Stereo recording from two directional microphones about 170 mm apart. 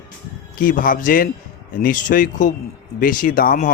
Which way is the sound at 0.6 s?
55° left (ahead or behind).